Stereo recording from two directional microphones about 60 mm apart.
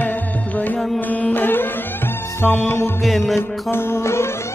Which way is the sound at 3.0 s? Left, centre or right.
Centre.